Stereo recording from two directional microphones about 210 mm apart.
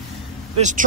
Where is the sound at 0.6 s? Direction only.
35° right (ahead or behind).